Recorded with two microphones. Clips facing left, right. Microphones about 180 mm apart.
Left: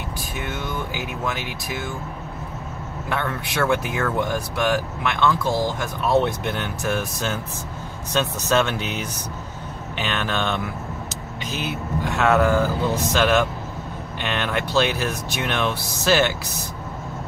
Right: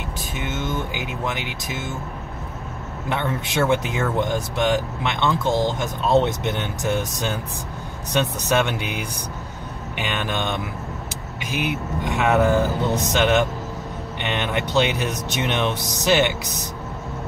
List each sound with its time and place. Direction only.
0.4 s speech: 20° right (ahead or behind)
3.1 s speech: 20° right (ahead or behind)